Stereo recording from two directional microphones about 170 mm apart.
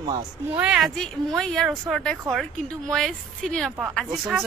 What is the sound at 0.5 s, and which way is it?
A woman's voice, 5° right (ahead or behind).